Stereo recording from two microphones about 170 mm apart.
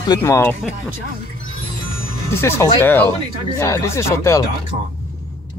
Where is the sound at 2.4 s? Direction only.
15° left (ahead or behind).